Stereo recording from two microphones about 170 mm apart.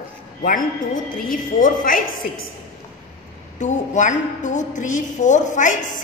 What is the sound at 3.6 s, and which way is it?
A woman's voice, 45° left (ahead or behind).